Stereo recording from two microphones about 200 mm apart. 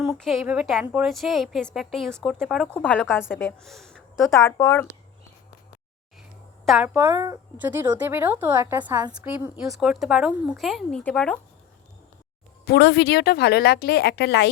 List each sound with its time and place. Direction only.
0.0 s a woman's voice: centre (ahead or behind)
6.7 s a woman's voice: 5° right (ahead or behind)
12.6 s a woman's voice: 55° left (ahead or behind)